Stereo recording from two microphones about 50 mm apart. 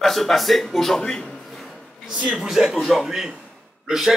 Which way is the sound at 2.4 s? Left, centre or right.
Centre.